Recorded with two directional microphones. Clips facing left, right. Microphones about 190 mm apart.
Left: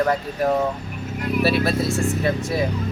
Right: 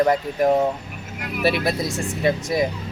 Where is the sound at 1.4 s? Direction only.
15° right (ahead or behind).